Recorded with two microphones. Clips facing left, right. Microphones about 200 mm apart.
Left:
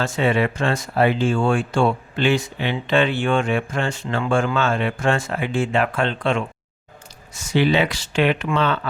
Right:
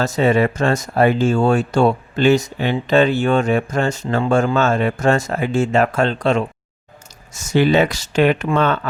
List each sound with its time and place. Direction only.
0.0 s speech: 40° right (ahead or behind)